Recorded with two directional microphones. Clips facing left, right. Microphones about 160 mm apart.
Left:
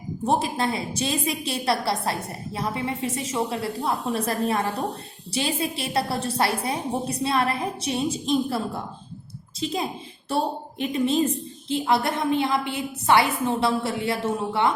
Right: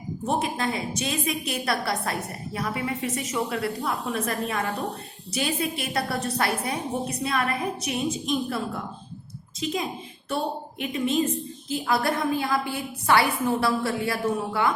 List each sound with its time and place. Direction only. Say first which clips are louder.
0.3 s a woman's voice: left 3 dB; 30° left (ahead or behind)